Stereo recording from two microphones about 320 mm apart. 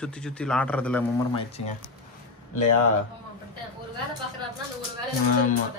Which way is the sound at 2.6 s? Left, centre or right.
Left.